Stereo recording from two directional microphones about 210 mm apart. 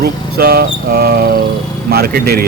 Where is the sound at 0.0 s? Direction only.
45° right (ahead or behind).